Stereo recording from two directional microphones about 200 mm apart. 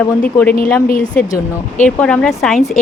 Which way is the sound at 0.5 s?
45° left (ahead or behind).